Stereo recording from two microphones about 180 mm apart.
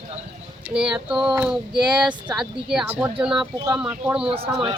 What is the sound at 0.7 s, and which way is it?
Speech, 5° right (ahead or behind).